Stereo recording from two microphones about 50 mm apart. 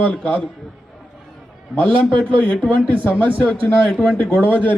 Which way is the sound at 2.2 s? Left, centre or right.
Left.